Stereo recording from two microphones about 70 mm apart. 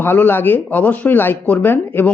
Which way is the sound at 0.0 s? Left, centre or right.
Left.